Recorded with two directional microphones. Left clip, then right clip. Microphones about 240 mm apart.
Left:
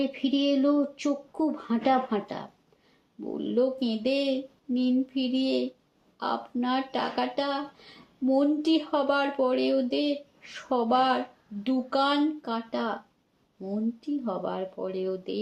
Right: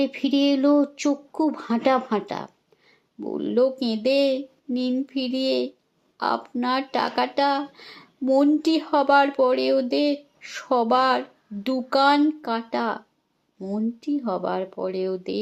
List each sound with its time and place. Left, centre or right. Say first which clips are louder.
0.0 s speech: right 5 dB; right